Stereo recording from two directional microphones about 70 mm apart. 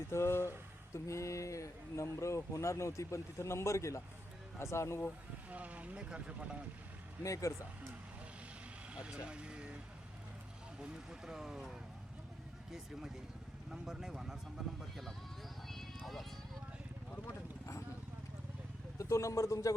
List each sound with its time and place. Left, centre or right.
0.1 s speech: left
5.5 s speech: right
7.2 s speech: left
8.9 s vehicle: centre
10.8 s speech: centre
13.7 s speech: centre
15.6 s music: centre
17.2 s vehicle: left
18.9 s speech: left